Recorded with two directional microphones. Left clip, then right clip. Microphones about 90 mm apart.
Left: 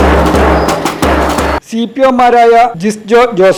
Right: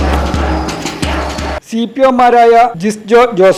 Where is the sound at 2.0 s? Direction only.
Centre (ahead or behind).